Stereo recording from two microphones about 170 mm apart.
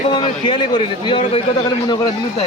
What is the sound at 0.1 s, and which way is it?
A man's voice, 25° left (ahead or behind).